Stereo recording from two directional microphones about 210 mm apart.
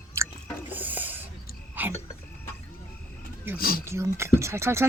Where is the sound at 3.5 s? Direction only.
45° left (ahead or behind).